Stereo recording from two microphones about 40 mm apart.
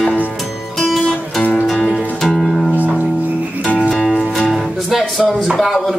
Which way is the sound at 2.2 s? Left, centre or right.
Centre.